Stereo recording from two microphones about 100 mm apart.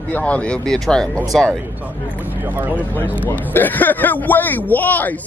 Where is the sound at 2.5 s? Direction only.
20° right (ahead or behind).